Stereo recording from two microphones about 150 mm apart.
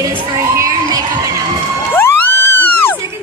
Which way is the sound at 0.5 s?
20° right (ahead or behind).